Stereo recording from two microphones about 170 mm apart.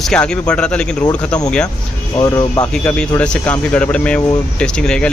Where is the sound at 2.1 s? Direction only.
20° left (ahead or behind).